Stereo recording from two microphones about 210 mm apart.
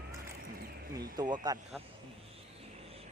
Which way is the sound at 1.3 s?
20° right (ahead or behind).